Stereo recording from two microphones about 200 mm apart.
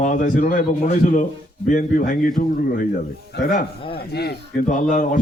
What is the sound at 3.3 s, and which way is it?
Speech, 45° left (ahead or behind).